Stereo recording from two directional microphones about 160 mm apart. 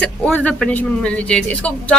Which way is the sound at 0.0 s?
10° left (ahead or behind).